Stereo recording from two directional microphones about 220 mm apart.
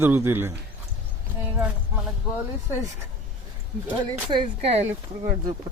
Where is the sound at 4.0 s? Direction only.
20° right (ahead or behind).